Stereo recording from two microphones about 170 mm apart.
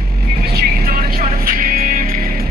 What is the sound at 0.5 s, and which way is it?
Vehicle, 65° right (ahead or behind).